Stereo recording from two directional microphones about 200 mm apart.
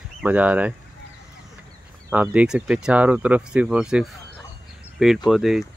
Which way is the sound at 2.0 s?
10° right (ahead or behind).